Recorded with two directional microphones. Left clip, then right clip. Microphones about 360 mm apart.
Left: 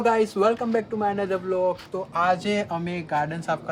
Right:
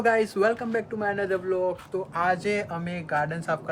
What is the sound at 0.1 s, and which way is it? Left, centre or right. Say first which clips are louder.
Speech: even; centre.